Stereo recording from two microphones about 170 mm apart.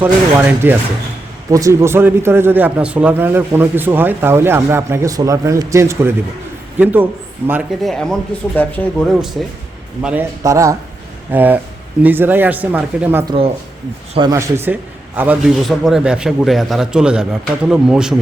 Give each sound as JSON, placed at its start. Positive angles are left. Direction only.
{"t": 0.0, "sound": "a man's voice", "side_deg": -10}
{"t": 7.8, "sound": "a man's voice", "side_deg": 0}
{"t": 10.0, "sound": "a man's voice", "side_deg": -5}
{"t": 10.4, "sound": "a man's voice", "side_deg": -20}
{"t": 13.2, "sound": "speech", "side_deg": -30}
{"t": 14.3, "sound": "a man's voice", "side_deg": -15}